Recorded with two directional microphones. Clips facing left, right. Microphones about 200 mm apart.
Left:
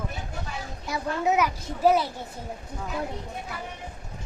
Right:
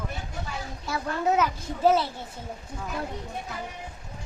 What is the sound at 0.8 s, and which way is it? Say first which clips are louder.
A woman's voice: left 1 dB; 15° left (ahead or behind).